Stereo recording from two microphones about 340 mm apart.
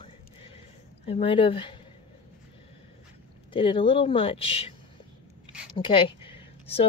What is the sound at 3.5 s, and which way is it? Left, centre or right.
Speech, centre.